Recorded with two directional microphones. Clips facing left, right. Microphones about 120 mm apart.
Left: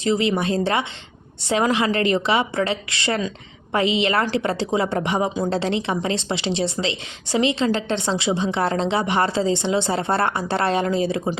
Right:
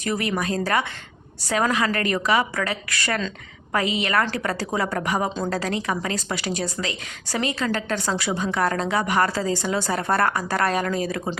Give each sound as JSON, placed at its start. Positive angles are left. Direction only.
{"t": 0.0, "sound": "a woman's voice", "side_deg": 25}